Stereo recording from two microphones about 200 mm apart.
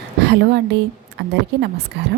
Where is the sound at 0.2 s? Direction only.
60° right (ahead or behind).